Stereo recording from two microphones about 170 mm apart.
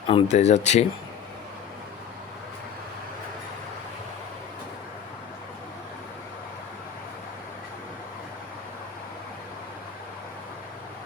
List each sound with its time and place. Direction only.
0.1 s speech: 35° left (ahead or behind)